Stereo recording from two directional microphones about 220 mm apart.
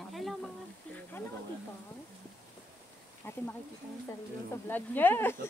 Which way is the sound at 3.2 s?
10° left (ahead or behind).